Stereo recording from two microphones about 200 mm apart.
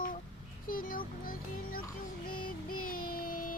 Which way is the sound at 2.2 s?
45° left (ahead or behind).